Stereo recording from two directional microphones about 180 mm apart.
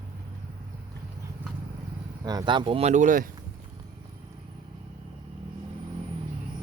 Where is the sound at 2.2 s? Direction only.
25° right (ahead or behind); by 3.2 s 45° right (ahead or behind).